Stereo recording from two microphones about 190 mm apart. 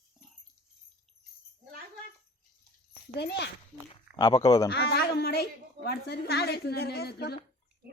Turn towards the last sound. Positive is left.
turn(degrees=55)  # may be behind; listen again after turning